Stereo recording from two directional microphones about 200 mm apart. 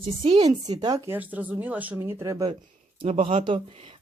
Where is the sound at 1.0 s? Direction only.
10° right (ahead or behind).